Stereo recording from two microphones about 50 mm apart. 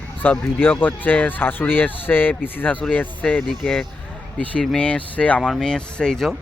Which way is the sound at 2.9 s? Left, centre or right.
Left.